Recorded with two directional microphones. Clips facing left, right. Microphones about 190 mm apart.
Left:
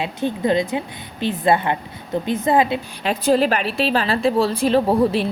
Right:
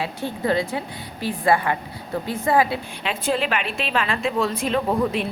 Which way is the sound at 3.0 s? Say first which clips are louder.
Left 7 dB; 40° left (ahead or behind).